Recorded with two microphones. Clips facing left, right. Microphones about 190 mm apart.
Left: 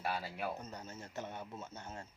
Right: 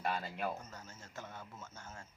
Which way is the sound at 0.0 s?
5° left (ahead or behind).